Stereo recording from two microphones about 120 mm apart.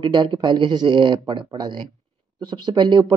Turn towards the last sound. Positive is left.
turn(degrees=-40)  # may be behind; listen again after turning